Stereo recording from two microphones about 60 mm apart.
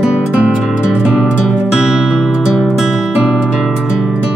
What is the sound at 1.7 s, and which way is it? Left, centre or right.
Music, centre.